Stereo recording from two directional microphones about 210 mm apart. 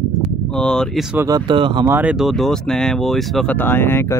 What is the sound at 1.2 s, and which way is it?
Speech, 20° right (ahead or behind).